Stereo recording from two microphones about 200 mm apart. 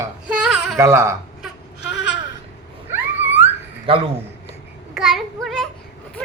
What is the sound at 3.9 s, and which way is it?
Speech, 30° right (ahead or behind).